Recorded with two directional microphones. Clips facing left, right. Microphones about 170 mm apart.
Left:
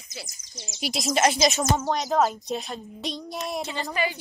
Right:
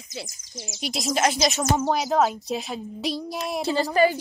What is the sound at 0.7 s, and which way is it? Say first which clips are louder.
Speech: left 1 dB; centre (ahead or behind).